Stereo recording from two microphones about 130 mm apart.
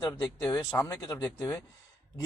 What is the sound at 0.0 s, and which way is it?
Speech, 20° left (ahead or behind).